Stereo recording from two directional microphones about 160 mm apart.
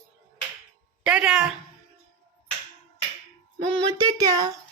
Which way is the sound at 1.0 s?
5° right (ahead or behind).